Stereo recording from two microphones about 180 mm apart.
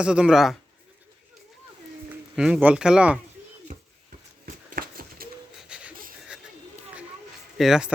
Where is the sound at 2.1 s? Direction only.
5° right (ahead or behind).